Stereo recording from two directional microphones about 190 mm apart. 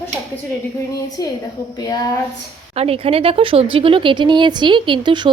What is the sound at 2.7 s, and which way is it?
Speech, 30° right (ahead or behind).